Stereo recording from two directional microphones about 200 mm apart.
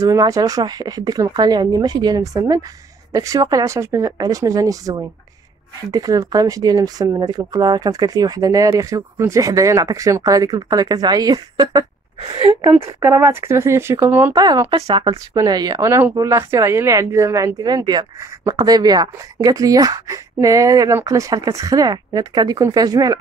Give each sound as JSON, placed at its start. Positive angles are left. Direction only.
{"t": 0.0, "sound": "speech", "side_deg": -15}
{"t": 13.0, "sound": "speech", "side_deg": -10}